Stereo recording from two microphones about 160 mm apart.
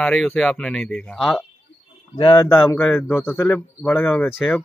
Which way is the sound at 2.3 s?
20° left (ahead or behind).